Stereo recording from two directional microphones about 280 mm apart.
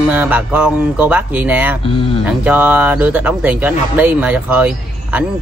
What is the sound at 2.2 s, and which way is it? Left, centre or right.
Speech, centre.